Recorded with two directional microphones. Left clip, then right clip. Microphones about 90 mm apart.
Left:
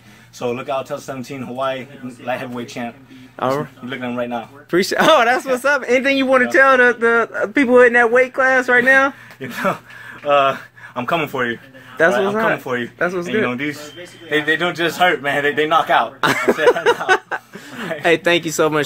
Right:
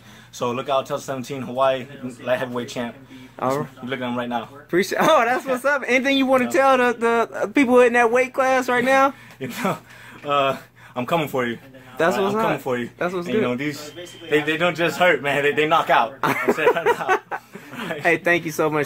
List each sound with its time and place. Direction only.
0.4 s speech: 35° right (ahead or behind)
3.3 s speech: 40° left (ahead or behind)
3.9 s speech: 35° right (ahead or behind)
4.6 s speech: 45° left (ahead or behind)
6.0 s a man's voice: 5° left (ahead or behind); by 8.8 s 20° left (ahead or behind)
9.4 s speech: 35° right (ahead or behind)
12.7 s speech: 35° right (ahead or behind)
13.0 s speech: 25° left (ahead or behind)
13.4 s a man's voice: 25° right (ahead or behind)
16.2 s speech: 55° left (ahead or behind)